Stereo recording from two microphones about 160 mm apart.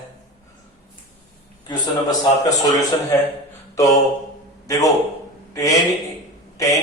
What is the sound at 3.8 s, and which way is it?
A man's voice, 20° left (ahead or behind).